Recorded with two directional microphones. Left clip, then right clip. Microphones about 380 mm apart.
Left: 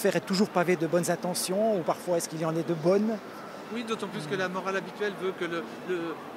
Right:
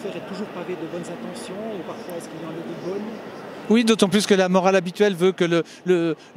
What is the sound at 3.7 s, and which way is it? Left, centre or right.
Speech, right.